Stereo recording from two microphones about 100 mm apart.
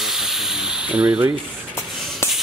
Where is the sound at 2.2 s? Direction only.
30° left (ahead or behind).